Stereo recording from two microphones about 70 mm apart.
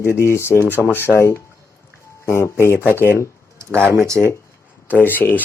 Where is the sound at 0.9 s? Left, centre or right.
Left.